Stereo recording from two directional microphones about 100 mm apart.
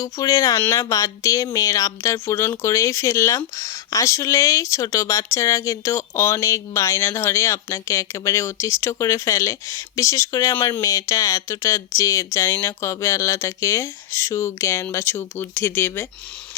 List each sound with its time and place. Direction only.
0.0 s speech: 35° left (ahead or behind)